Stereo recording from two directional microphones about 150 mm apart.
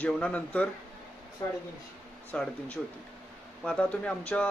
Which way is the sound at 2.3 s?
5° left (ahead or behind).